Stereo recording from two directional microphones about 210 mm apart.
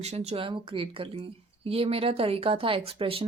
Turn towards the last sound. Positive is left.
turn(degrees=-25)  # may be behind; listen again after turning